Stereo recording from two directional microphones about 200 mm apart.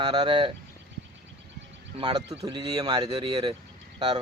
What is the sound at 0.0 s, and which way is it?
Speech, 25° right (ahead or behind).